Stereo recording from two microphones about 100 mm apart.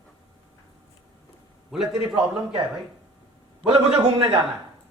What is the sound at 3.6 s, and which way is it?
Speech, 65° right (ahead or behind).